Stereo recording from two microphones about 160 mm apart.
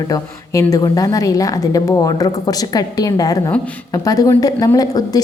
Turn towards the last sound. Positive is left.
turn(degrees=25)  # may be behind; listen again after turning